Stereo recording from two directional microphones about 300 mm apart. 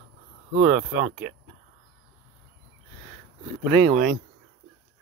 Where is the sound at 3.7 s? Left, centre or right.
Centre.